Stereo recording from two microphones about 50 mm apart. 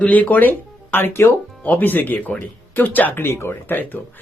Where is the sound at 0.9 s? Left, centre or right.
Left.